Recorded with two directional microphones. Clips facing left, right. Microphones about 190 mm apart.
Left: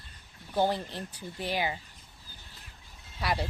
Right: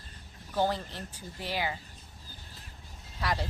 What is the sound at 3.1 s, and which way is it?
Speech, 15° left (ahead or behind).